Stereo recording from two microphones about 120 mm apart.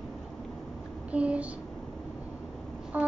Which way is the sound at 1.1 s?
10° right (ahead or behind).